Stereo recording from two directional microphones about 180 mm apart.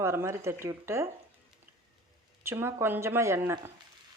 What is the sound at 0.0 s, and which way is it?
Speech, 15° right (ahead or behind).